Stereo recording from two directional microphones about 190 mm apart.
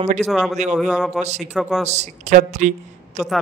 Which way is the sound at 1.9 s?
40° right (ahead or behind).